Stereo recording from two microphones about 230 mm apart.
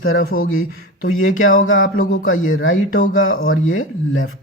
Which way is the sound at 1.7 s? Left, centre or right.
Left.